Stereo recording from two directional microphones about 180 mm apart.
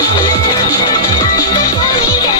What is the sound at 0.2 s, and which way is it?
Music, 20° left (ahead or behind).